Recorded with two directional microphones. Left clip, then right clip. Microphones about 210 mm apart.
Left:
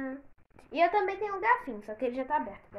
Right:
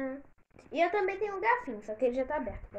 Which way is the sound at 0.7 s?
35° left (ahead or behind).